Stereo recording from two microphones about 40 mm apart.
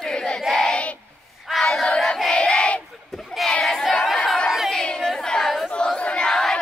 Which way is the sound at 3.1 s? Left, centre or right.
Centre.